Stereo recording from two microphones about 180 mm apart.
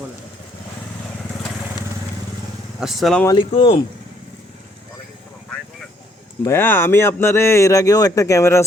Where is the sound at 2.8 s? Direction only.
Centre (ahead or behind).